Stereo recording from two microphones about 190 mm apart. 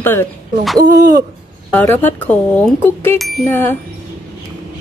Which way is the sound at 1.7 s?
10° left (ahead or behind).